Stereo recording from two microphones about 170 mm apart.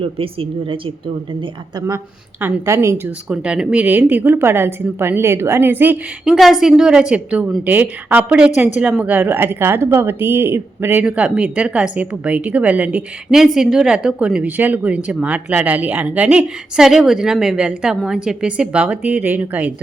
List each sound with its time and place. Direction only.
0.0 s a woman's voice: 30° right (ahead or behind); by 3.1 s 15° right (ahead or behind)
3.2 s speech: 5° right (ahead or behind)
6.3 s speech: centre (ahead or behind)